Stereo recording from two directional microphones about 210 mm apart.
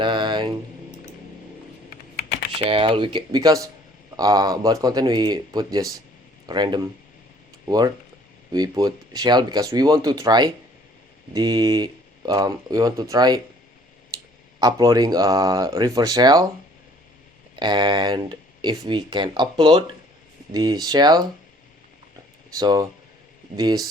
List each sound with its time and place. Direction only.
0.0 s mantra: 20° right (ahead or behind)
2.6 s speech: 25° right (ahead or behind)
8.5 s speech: 15° right (ahead or behind)
14.6 s speech: 15° right (ahead or behind)
17.6 s speech: 20° right (ahead or behind)
22.5 s speech: 20° right (ahead or behind)